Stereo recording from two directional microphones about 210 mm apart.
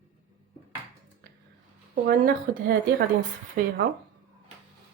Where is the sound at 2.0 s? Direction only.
45° right (ahead or behind).